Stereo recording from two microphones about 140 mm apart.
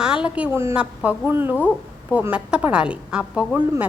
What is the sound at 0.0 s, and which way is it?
A woman's voice, 5° right (ahead or behind).